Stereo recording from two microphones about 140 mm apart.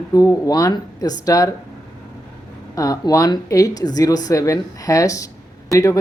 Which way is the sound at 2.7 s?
25° left (ahead or behind).